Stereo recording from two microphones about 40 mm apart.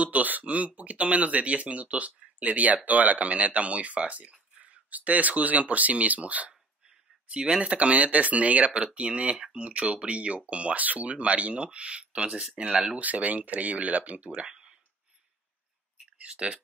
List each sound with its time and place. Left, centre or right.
0.0 s speech: right
7.2 s speech: right
7.6 s speech: right
11.1 s speech: right
13.0 s speech: right
14.5 s a sound: centre
16.2 s speech: right